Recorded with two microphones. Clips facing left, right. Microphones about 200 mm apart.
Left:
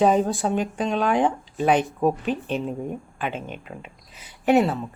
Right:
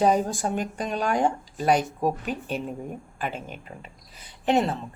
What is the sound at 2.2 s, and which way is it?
Speech, 5° right (ahead or behind).